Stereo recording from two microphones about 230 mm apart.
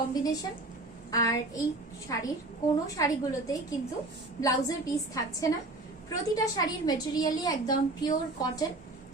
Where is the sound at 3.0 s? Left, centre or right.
Centre.